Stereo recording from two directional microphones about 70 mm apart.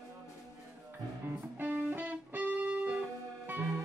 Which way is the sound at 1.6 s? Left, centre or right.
Right.